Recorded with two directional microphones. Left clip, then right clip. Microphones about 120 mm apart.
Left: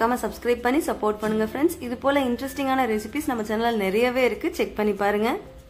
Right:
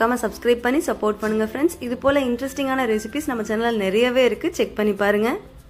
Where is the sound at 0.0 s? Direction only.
25° right (ahead or behind).